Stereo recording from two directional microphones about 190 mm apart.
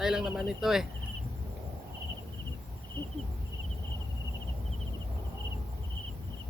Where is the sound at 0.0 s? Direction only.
5° right (ahead or behind).